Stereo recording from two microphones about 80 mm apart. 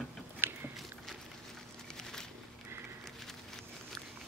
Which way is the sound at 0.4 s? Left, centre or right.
Right.